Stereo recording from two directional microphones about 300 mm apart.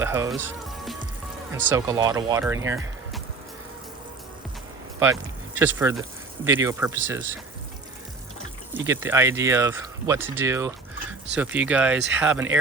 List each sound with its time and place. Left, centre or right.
0.0 s speech: centre
5.5 s speech: centre
8.9 s speech: centre